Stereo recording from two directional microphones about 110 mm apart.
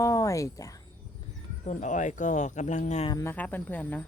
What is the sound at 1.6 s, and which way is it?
Speech, 90° left.